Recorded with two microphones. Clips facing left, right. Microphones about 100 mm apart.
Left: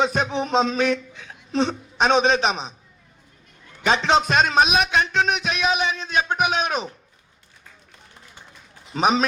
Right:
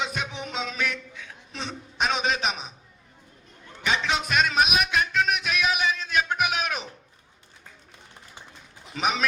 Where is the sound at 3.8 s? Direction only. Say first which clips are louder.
Left 7 dB; 30° left (ahead or behind).